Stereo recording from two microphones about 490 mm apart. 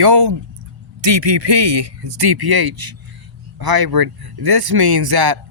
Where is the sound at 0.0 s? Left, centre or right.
Right.